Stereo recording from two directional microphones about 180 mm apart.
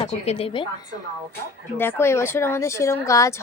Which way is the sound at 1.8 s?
10° left (ahead or behind).